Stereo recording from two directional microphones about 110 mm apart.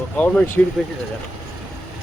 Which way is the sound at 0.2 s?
15° left (ahead or behind).